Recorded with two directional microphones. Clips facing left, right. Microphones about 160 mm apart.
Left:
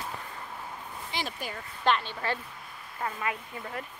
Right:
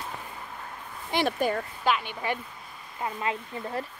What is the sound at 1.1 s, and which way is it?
Speech, 60° right (ahead or behind).